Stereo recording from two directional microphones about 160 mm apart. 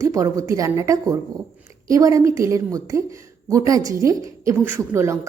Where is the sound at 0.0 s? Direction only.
20° right (ahead or behind).